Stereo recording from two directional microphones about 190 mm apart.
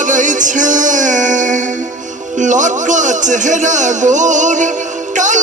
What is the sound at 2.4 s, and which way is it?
A man's voice, 40° right (ahead or behind).